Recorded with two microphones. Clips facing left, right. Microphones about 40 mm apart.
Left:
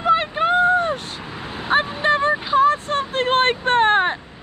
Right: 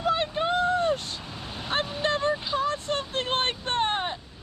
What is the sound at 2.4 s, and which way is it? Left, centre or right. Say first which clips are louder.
Vehicle: left 11 dB; left.